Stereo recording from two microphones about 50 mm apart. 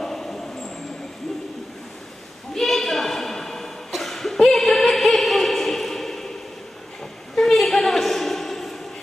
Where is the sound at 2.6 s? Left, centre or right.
Centre.